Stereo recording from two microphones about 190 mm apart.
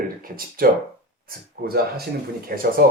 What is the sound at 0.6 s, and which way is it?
Speech, 50° right (ahead or behind).